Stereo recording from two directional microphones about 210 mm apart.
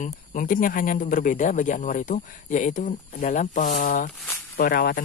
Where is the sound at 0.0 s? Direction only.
40° left (ahead or behind).